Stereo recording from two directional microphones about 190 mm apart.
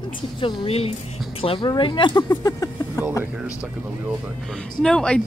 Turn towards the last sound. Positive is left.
turn(degrees=5)  # may be behind; listen again after turning